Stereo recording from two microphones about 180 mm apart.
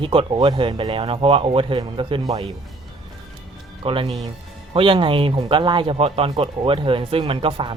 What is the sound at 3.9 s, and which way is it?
Speech, 30° right (ahead or behind).